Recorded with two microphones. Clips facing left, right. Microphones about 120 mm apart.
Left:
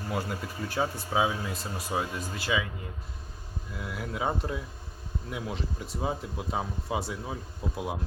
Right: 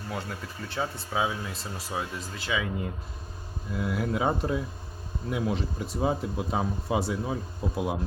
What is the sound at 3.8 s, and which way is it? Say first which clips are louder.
Speech: right 8 dB; 60° right (ahead or behind).